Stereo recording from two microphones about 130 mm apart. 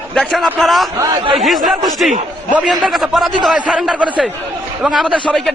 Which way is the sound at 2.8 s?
Centre (ahead or behind).